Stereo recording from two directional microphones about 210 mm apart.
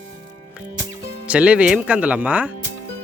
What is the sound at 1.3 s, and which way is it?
Speech, 5° right (ahead or behind).